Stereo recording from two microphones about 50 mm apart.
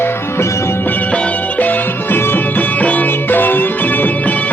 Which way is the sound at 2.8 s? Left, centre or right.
Left.